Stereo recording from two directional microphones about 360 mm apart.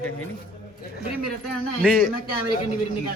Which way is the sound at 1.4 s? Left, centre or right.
Centre.